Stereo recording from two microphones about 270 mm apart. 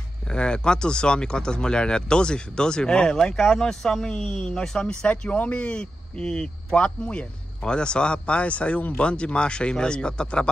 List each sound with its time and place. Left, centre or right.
0.3 s speech: centre